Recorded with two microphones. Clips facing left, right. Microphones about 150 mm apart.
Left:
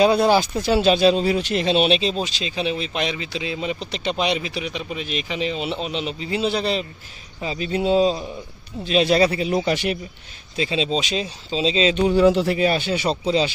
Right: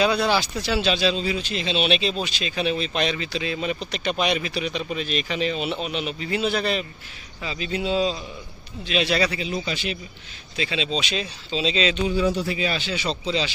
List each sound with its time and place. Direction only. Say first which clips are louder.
0.0 s speech: left 5 dB; 45° left (ahead or behind)
1.9 s speech: left 3 dB; 35° left (ahead or behind)
2.5 s speech: right 1 dB; 20° left (ahead or behind)
7.4 s speech: left 5 dB; 40° left (ahead or behind)
9.4 s a man's voice: left 7 dB; 60° left (ahead or behind)
10.5 s speech: left 4 dB; 35° left (ahead or behind)
12.0 s a man's voice: left 6 dB; 65° left (ahead or behind)
12.4 s speech: left 6 dB; 45° left (ahead or behind)